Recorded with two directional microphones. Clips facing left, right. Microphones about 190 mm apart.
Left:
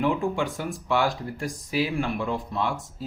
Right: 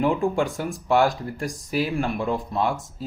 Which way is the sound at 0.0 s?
50° right (ahead or behind).